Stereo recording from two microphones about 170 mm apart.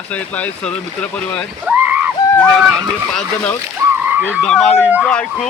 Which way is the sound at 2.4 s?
5° left (ahead or behind).